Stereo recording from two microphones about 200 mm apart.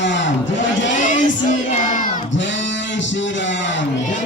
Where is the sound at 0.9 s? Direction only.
40° left (ahead or behind).